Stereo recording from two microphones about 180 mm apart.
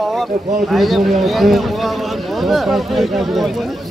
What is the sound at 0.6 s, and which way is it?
A man's voice, centre (ahead or behind).